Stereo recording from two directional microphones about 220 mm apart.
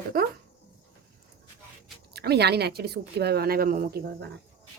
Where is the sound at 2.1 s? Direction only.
45° right (ahead or behind).